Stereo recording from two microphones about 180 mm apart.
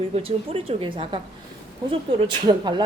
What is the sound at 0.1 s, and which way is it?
A woman's voice, 35° right (ahead or behind).